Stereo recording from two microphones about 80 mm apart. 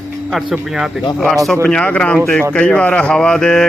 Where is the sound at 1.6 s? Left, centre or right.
Centre.